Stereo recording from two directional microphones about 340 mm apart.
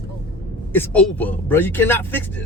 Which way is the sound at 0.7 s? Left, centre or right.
Centre.